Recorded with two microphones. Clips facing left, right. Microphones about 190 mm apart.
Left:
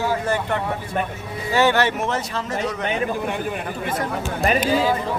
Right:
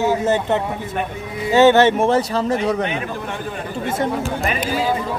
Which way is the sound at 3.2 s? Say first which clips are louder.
Left 2 dB; 15° left (ahead or behind).